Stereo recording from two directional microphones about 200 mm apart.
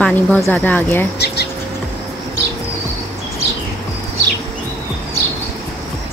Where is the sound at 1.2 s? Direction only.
55° left (ahead or behind).